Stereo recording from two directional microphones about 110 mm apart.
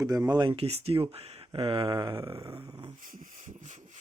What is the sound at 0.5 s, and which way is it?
Speech, 65° right (ahead or behind).